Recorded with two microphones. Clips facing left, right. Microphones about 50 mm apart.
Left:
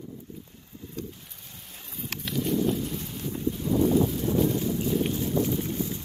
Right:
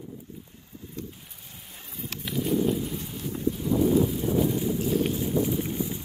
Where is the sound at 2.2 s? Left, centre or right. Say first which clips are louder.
Right 1 dB; centre.